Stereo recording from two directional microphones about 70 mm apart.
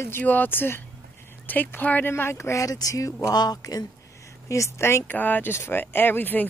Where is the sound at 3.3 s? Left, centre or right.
Left.